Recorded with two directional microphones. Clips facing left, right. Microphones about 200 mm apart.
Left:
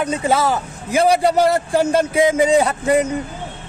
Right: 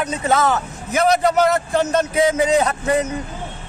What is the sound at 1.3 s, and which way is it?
Speech, 30° left (ahead or behind).